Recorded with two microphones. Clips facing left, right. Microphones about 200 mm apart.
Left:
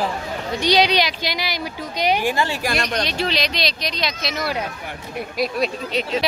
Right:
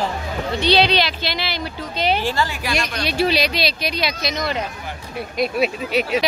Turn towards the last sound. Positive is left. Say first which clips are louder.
# right 3 dB
turn(degrees=-5)  # may be behind; listen again after turning